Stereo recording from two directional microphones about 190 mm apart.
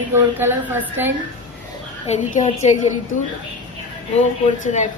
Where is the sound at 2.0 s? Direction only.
40° left (ahead or behind).